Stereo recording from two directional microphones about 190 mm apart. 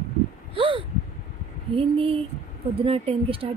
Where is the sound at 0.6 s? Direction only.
25° right (ahead or behind).